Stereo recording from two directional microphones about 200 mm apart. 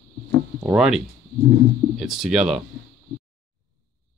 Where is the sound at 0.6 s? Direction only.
5° right (ahead or behind).